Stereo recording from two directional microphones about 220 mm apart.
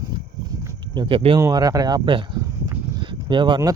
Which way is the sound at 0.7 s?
20° right (ahead or behind).